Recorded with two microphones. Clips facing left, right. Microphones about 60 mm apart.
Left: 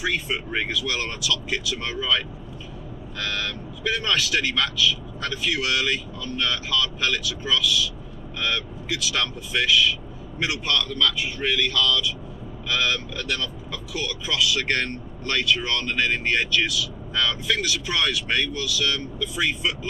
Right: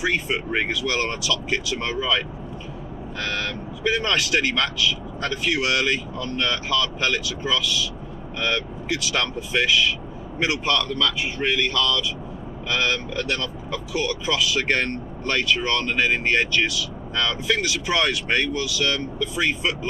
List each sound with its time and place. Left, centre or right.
0.0 s speech: centre